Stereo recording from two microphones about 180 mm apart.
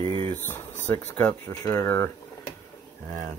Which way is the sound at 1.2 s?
20° left (ahead or behind).